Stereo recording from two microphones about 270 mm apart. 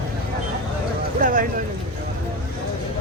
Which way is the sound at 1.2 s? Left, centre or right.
Right.